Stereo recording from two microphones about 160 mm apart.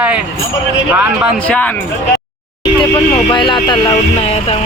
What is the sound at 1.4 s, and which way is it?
Speech, 10° left (ahead or behind).